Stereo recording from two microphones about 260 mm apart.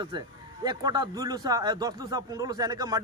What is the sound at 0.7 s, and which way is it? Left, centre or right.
A man's voice, centre.